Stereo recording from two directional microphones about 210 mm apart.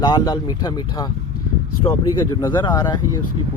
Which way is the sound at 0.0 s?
20° left (ahead or behind).